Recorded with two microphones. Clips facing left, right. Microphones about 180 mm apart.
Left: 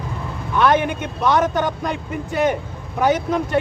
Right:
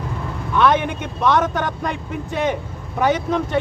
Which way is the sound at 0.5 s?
5° left (ahead or behind).